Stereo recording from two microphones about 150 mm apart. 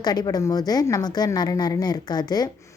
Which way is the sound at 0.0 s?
25° left (ahead or behind).